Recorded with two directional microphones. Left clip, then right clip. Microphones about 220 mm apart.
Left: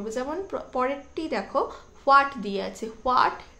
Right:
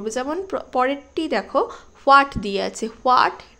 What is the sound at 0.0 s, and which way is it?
A woman's voice, 40° right (ahead or behind).